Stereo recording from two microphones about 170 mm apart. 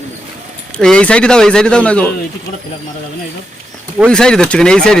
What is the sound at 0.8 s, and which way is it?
Speech, 5° left (ahead or behind).